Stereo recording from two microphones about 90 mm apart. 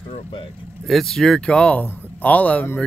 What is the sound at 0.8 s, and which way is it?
Speech, 5° left (ahead or behind).